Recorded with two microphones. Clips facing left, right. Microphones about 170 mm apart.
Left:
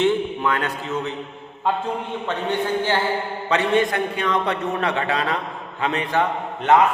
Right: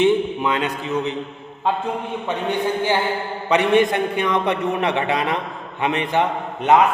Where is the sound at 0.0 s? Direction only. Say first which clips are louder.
Right 3 dB; 15° right (ahead or behind).